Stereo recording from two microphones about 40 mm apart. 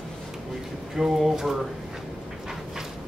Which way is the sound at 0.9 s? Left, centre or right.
Centre.